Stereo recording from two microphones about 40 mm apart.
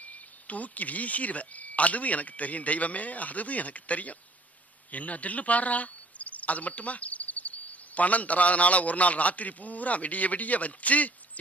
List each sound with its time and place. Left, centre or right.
0.0 s speech: left
4.9 s cricket: left